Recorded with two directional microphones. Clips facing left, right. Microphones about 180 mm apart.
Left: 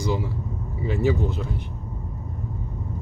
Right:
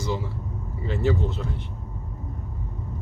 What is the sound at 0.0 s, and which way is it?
Vehicle, 15° left (ahead or behind).